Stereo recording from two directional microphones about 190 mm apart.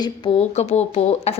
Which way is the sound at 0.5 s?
35° left (ahead or behind).